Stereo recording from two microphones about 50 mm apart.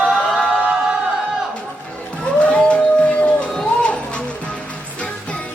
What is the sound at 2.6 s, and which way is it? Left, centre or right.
Music, centre.